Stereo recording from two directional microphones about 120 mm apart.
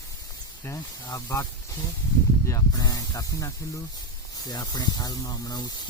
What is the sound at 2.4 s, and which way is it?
Speech, 30° left (ahead or behind).